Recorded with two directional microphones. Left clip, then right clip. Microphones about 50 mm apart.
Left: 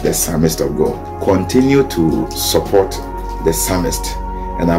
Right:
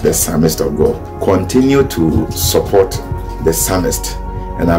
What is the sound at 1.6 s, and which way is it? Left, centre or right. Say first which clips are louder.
Speech: right 1 dB; right.